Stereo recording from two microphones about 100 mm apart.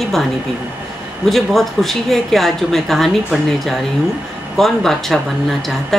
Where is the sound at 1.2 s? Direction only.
Centre (ahead or behind).